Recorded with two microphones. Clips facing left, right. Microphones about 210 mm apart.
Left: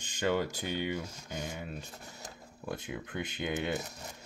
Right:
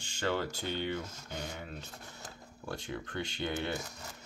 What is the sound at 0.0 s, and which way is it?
Speech, 15° left (ahead or behind).